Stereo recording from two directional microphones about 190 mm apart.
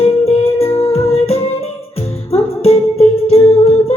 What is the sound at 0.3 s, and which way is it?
Music, 30° left (ahead or behind).